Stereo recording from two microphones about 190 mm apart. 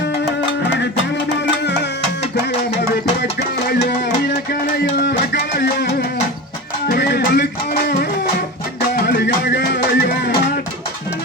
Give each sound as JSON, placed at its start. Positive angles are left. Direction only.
{"t": 3.7, "sound": "music", "side_deg": 60}
{"t": 9.0, "sound": "music", "side_deg": 60}